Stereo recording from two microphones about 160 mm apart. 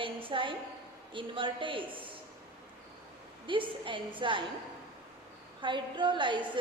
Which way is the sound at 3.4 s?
30° right (ahead or behind).